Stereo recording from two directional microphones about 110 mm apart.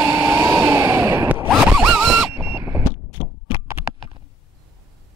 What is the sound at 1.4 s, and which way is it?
Zipper, centre (ahead or behind).